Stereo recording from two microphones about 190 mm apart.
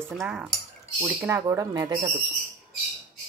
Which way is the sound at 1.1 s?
15° right (ahead or behind).